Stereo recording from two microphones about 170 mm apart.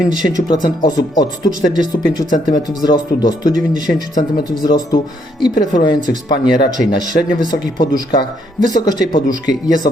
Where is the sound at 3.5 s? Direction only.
50° right (ahead or behind).